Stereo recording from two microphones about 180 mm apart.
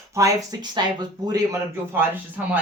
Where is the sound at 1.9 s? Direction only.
10° right (ahead or behind).